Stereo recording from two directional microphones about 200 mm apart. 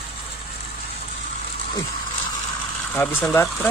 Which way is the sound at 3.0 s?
10° left (ahead or behind).